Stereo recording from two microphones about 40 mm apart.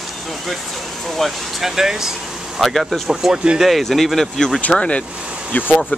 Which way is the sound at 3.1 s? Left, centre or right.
Centre.